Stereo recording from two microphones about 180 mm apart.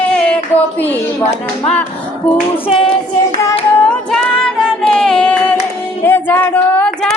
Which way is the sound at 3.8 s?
5° left (ahead or behind).